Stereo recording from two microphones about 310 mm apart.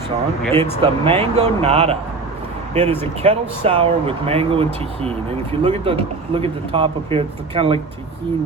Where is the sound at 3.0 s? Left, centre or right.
Centre.